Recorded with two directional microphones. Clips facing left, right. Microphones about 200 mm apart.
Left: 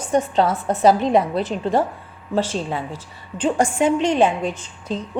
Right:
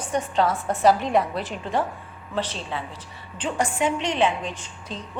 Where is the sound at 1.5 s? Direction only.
40° left (ahead or behind).